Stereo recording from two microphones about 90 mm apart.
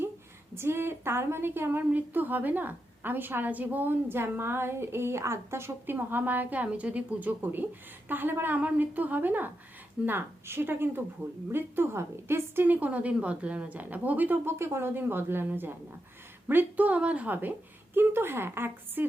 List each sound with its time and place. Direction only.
0.5 s a woman's voice: 25° right (ahead or behind)